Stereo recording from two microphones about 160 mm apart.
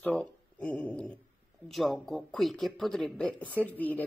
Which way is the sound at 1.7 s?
Centre (ahead or behind).